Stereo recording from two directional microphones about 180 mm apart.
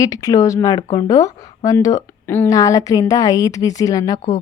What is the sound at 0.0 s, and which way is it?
A woman's voice, 20° left (ahead or behind).